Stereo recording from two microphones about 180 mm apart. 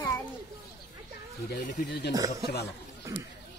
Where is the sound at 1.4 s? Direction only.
60° left (ahead or behind).